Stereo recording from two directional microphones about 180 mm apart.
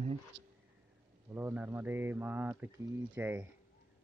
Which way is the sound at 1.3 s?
10° right (ahead or behind).